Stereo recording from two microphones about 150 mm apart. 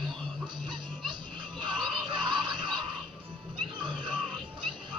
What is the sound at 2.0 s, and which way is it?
Music, 30° right (ahead or behind).